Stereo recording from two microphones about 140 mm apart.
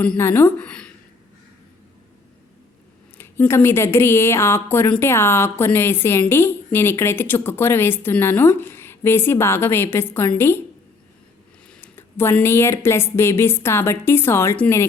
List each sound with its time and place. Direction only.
0.0 s a woman's voice: 15° left (ahead or behind)
3.2 s a woman's voice: 15° left (ahead or behind)
11.7 s a woman's voice: 15° left (ahead or behind)